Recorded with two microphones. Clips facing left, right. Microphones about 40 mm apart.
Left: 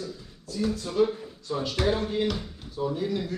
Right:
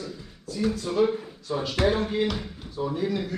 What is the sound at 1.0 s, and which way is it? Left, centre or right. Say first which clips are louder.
A man's voice: right 1 dB; centre.